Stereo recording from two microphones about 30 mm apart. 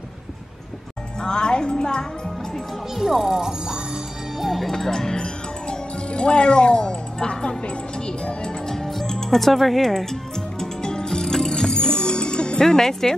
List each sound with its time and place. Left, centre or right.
1.2 s speech: left
2.9 s speech: centre
4.4 s music: centre
4.7 s music: centre
6.0 s speech: left
7.6 s music: left
8.6 s music: centre
9.4 s speech: centre
9.8 s music: centre; by 12.6 s left
12.6 s speech: centre